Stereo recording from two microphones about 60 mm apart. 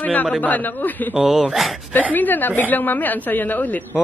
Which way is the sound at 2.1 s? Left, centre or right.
Left.